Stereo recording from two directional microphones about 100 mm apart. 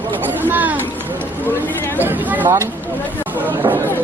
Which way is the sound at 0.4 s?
20° right (ahead or behind).